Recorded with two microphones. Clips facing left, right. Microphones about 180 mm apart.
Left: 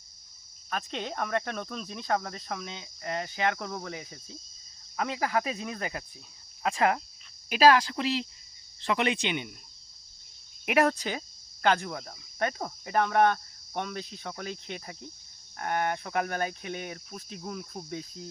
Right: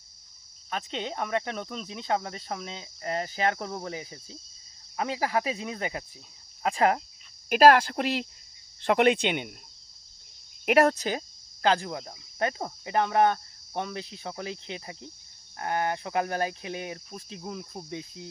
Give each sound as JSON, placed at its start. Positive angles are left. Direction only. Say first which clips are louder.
{"t": 0.7, "sound": "cricket", "louder": "right 1 dB", "side_deg": -20}
{"t": 6.6, "sound": "speech", "louder": "right 2 dB", "side_deg": -35}
{"t": 7.5, "sound": "speech", "louder": "right 3 dB", "side_deg": -50}
{"t": 10.7, "sound": "speech", "louder": "right 3 dB", "side_deg": -45}
{"t": 11.6, "sound": "cricket", "louder": "right 1 dB", "side_deg": -30}
{"t": 13.8, "sound": "cricket", "louder": "right 1 dB", "side_deg": -25}
{"t": 15.5, "sound": "speech", "louder": "right 1 dB", "side_deg": -30}
{"t": 17.4, "sound": "cricket", "louder": "even", "side_deg": -15}
{"t": 17.8, "sound": "cricket", "louder": "even", "side_deg": 0}